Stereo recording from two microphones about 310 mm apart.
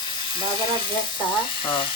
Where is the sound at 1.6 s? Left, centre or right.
Centre.